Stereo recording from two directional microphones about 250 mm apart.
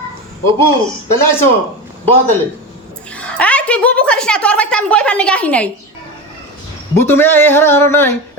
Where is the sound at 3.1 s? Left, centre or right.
Centre.